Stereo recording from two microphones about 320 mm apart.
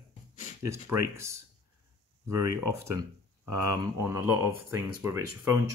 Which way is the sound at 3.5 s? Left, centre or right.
Right.